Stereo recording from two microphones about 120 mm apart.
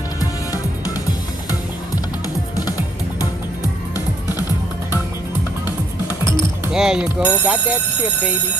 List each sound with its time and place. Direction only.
0.2 s music: 30° left (ahead or behind)
3.9 s music: 30° left (ahead or behind)
6.7 s speech: 5° right (ahead or behind)